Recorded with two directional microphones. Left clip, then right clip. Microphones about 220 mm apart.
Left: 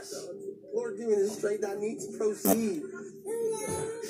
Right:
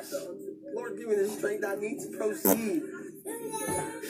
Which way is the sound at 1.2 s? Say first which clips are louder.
Even; 40° right (ahead or behind).